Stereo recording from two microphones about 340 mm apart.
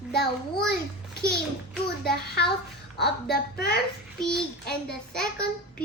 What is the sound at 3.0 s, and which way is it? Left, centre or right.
Speech, left.